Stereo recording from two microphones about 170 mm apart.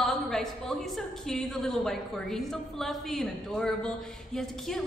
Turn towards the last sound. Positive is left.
turn(degrees=0)  # may be behind; listen again after turning